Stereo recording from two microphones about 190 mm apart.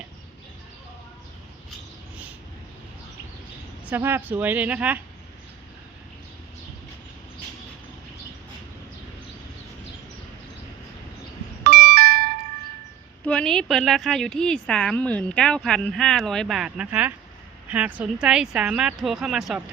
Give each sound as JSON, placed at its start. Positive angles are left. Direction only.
{"t": 3.8, "sound": "speech", "side_deg": -10}
{"t": 11.6, "sound": "doorbell", "side_deg": -55}
{"t": 13.2, "sound": "speech", "side_deg": 5}